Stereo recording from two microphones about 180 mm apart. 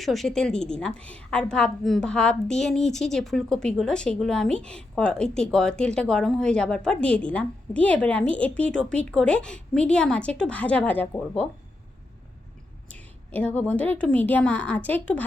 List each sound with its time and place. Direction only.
0.0 s a woman's voice: centre (ahead or behind)
12.9 s a woman's voice: 10° left (ahead or behind)